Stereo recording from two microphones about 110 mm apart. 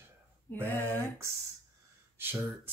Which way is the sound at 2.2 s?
20° right (ahead or behind).